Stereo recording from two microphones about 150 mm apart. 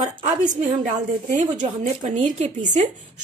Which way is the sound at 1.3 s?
55° right (ahead or behind).